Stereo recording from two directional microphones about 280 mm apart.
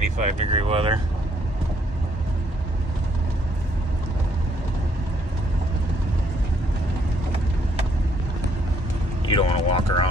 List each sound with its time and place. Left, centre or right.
0.2 s speech: right
9.2 s speech: centre